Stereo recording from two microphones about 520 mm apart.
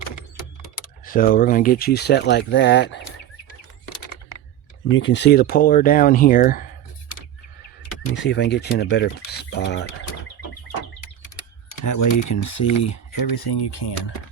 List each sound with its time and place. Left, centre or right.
0.8 s speech: centre
4.9 s speech: left
8.0 s speech: left
11.9 s speech: left